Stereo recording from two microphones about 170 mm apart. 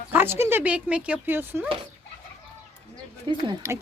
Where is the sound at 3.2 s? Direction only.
30° right (ahead or behind).